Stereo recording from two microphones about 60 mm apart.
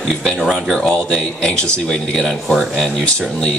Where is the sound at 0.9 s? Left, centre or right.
Centre.